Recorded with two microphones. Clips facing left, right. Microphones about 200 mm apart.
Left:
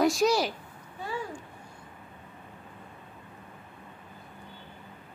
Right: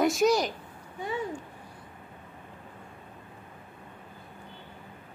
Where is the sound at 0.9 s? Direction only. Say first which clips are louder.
Right 3 dB; 20° right (ahead or behind).